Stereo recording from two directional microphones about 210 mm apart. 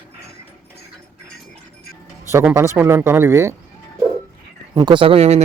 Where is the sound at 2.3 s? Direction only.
10° right (ahead or behind).